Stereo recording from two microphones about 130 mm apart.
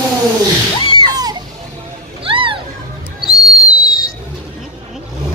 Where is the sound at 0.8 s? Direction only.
40° left (ahead or behind).